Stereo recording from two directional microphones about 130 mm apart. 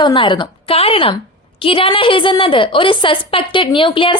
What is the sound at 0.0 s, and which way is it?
A woman's voice, 35° left (ahead or behind).